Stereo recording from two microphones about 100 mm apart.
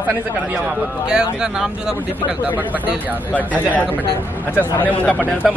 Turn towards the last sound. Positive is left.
turn(degrees=15)  # may be behind; listen again after turning